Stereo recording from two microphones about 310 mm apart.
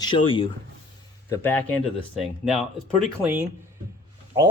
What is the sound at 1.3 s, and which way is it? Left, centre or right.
Speech, centre.